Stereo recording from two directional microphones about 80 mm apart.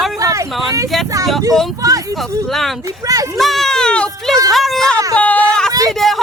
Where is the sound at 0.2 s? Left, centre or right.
Right.